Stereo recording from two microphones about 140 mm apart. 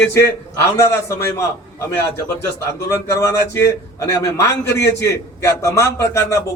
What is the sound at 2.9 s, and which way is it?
A man's voice, 20° left (ahead or behind).